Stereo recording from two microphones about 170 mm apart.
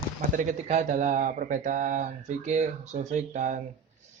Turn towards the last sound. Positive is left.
turn(degrees=-45)  # may be behind; listen again after turning